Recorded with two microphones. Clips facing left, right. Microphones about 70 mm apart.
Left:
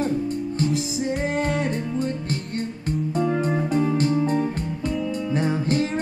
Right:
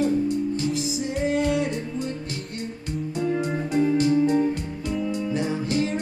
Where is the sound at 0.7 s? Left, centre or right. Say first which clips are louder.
Left 1 dB; centre.